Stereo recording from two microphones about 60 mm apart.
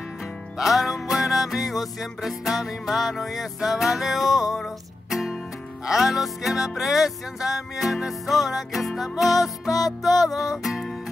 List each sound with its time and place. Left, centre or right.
0.6 s music: centre